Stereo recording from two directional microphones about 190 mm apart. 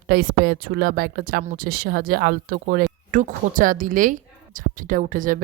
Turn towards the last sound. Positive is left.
turn(degrees=-45)  # may be behind; listen again after turning